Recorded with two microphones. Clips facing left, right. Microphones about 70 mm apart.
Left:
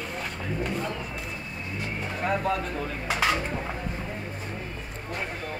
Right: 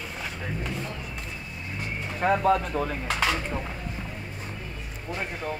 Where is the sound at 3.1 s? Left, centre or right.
Centre.